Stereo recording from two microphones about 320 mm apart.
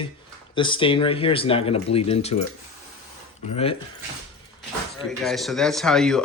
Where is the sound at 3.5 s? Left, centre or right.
Centre.